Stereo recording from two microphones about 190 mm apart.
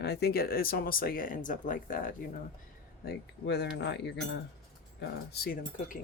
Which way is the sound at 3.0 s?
60° left (ahead or behind).